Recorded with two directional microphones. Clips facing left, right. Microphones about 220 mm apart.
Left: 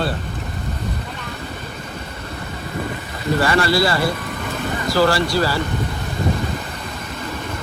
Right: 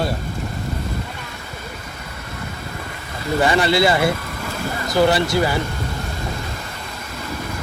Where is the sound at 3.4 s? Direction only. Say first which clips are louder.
Right 2 dB; 20° right (ahead or behind).